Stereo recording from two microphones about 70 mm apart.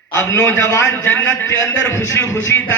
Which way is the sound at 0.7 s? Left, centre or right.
Left.